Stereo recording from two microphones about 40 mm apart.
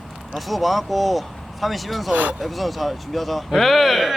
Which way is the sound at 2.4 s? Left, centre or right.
Centre.